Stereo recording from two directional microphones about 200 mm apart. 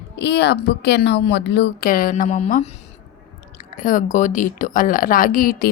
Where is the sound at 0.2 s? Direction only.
55° left (ahead or behind); by 2.6 s 35° left (ahead or behind).